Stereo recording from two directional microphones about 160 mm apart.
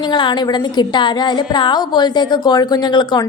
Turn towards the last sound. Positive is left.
turn(degrees=25)  # may be behind; listen again after turning